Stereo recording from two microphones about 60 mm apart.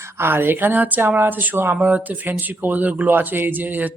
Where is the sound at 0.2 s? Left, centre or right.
Right.